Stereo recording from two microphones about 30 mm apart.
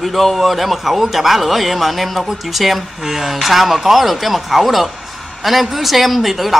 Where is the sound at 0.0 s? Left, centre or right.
Centre.